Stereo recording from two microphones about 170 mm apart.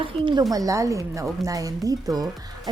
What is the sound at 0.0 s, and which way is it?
Speech, 30° right (ahead or behind).